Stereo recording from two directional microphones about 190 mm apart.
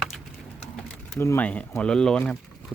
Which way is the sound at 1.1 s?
10° left (ahead or behind).